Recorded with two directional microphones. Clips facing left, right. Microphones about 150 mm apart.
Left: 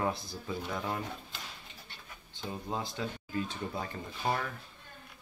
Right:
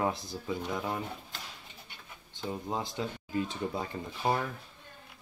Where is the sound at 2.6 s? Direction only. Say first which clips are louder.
Even; 20° right (ahead or behind).